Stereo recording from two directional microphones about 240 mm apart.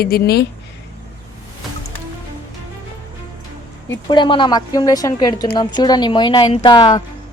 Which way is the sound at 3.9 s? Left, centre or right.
Centre.